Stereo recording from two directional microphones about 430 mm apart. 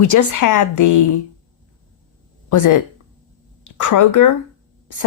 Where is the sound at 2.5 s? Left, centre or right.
Left.